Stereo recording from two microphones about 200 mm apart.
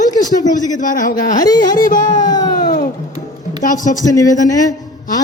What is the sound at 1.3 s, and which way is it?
Speech, 20° left (ahead or behind).